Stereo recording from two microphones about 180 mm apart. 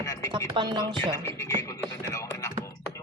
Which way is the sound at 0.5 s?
25° right (ahead or behind).